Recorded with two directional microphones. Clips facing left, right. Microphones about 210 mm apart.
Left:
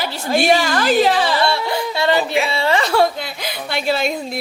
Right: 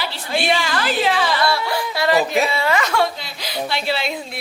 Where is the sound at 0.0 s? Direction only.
45° left (ahead or behind).